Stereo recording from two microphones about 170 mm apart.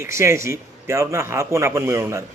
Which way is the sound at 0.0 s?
15° right (ahead or behind).